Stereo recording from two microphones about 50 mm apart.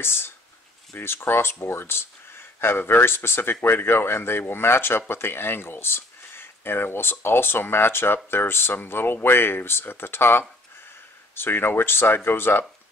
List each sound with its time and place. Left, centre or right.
0.0 s speech: left